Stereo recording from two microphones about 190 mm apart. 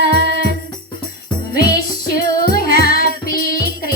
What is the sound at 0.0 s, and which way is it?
Music, 60° right (ahead or behind).